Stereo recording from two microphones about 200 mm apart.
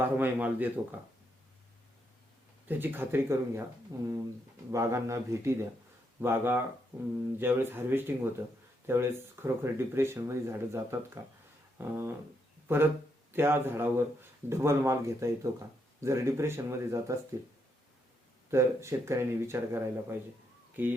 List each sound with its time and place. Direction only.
0.0 s speech: 10° right (ahead or behind)
2.6 s speech: 10° right (ahead or behind)
18.5 s speech: 15° right (ahead or behind)